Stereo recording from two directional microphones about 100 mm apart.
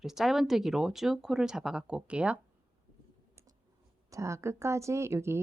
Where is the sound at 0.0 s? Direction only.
5° right (ahead or behind).